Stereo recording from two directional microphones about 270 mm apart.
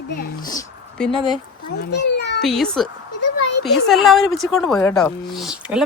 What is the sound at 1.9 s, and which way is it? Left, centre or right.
Speech, left.